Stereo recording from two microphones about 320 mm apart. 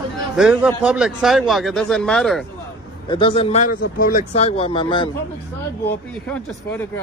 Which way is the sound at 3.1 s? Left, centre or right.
Centre.